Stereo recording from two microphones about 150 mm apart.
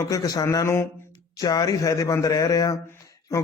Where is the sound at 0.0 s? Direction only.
25° left (ahead or behind).